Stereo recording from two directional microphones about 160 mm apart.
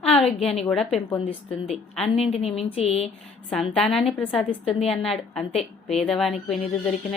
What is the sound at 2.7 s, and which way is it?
Speech, 40° left (ahead or behind).